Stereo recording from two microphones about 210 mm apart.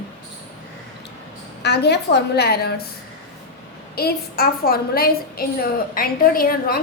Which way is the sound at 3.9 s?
45° left (ahead or behind).